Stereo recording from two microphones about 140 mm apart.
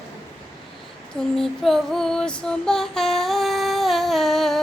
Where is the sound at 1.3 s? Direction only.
Centre (ahead or behind).